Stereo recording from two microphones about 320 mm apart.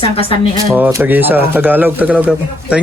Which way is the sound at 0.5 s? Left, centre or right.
Centre.